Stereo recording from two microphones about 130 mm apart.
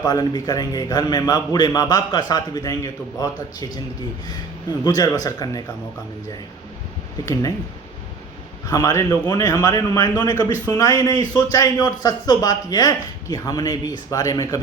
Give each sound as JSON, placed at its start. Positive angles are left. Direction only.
{"t": 0.0, "sound": "a man's voice", "side_deg": 30}
{"t": 8.7, "sound": "speech", "side_deg": 25}